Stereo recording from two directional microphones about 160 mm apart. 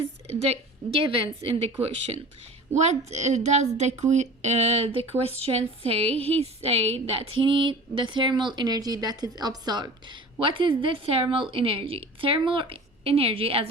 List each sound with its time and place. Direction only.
0.0 s a sound: 40° right (ahead or behind)
1.0 s speech: 40° right (ahead or behind)
2.7 s a woman's voice: 45° right (ahead or behind)